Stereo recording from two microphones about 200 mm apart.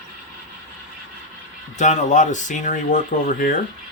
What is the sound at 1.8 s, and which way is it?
Speech, 35° left (ahead or behind).